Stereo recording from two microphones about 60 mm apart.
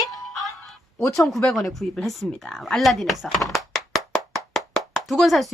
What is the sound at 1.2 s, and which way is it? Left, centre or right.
A woman's voice, centre.